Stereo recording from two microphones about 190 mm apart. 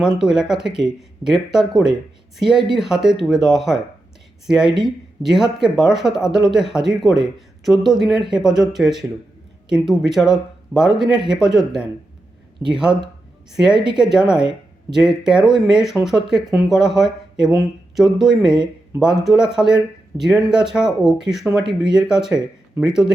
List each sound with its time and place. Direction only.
0.0 s speech: 5° right (ahead or behind)
4.6 s speech: 25° right (ahead or behind)
5.2 s speech: centre (ahead or behind)